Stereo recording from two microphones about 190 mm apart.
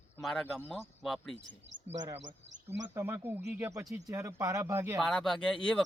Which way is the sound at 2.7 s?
10° right (ahead or behind).